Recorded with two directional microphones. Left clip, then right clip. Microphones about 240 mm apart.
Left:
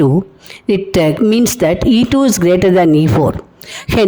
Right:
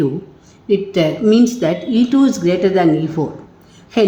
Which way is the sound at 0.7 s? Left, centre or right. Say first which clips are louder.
Left 3 dB; left.